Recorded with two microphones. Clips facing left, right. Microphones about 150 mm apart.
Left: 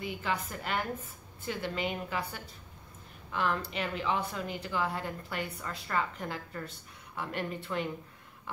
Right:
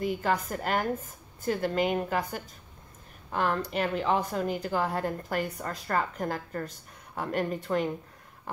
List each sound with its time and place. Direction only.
0.0 s a woman's voice: 45° right (ahead or behind)